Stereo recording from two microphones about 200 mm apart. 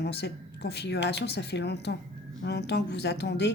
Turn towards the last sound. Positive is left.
turn(degrees=60)  # may be behind; listen again after turning